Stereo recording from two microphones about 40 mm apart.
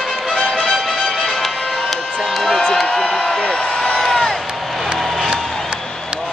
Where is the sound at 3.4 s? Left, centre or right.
Centre.